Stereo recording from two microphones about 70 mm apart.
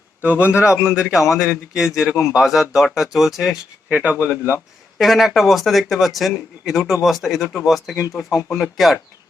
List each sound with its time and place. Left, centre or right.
0.2 s a man's voice: right; by 3.6 s centre
3.8 s speech: right
4.9 s a man's voice: centre